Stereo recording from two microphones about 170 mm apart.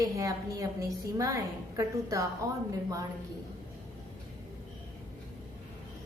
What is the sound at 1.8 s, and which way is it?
Speech, 20° right (ahead or behind).